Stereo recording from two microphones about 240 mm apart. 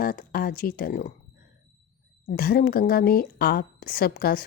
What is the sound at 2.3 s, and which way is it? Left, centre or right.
A woman's voice, left.